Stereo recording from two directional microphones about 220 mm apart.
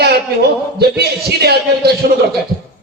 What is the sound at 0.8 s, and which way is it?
A man's voice, 45° right (ahead or behind).